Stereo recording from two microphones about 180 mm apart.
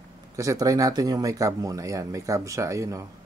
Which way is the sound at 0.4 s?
20° right (ahead or behind).